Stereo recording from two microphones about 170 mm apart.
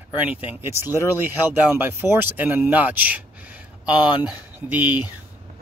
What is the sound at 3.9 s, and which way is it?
Speech, 30° left (ahead or behind).